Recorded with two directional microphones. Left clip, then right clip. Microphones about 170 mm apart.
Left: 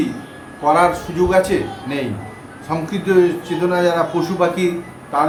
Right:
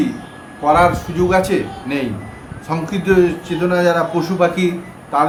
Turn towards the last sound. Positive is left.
turn(degrees=-25)  # may be behind; listen again after turning